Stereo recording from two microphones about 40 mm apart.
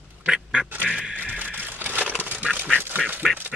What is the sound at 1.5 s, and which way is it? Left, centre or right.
Crushing, right.